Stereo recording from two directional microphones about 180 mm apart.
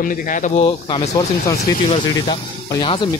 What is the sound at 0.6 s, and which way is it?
Speech, 25° left (ahead or behind).